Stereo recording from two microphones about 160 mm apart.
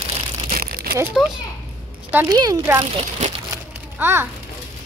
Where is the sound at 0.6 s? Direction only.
75° right (ahead or behind).